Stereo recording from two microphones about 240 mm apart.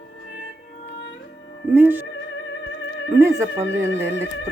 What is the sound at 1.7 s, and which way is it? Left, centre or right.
Music, centre.